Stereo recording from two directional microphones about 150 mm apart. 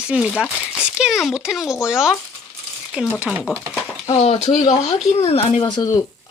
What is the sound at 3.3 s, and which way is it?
Speech, 5° right (ahead or behind).